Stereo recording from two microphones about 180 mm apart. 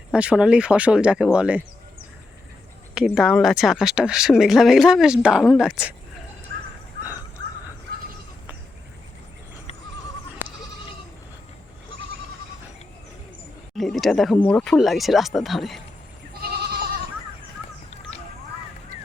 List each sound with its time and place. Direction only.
0.1 s speech: 5° right (ahead or behind)
2.9 s speech: 5° right (ahead or behind)
13.7 s speech: centre (ahead or behind)
16.3 s goat: 60° right (ahead or behind)